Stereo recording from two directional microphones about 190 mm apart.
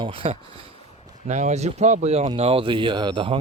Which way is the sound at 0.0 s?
30° right (ahead or behind).